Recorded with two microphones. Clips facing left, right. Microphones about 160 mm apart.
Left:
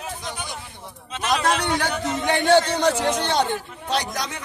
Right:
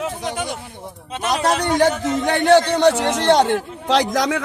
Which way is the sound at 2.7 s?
80° right.